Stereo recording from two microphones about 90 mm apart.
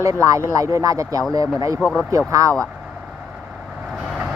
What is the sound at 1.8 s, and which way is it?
Speech, 10° left (ahead or behind).